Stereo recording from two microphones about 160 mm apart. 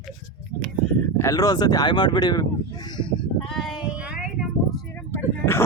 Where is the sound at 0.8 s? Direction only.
5° right (ahead or behind).